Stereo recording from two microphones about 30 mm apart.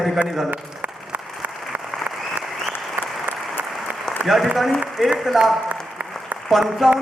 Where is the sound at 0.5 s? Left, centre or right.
Right.